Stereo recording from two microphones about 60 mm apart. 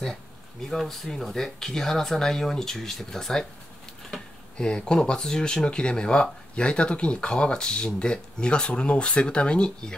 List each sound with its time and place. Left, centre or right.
0.0 s speech: centre